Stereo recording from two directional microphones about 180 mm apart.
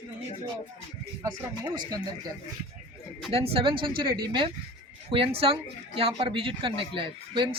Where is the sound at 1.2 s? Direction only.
20° right (ahead or behind).